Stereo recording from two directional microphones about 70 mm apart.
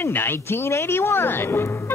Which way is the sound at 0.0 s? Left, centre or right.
Left.